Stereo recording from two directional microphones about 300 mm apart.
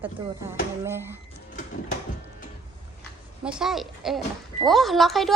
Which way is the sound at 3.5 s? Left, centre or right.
Centre.